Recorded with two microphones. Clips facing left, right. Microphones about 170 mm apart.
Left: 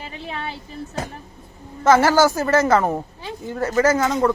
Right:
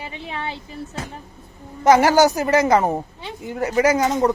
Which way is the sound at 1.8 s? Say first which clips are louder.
Right 1 dB; 15° right (ahead or behind).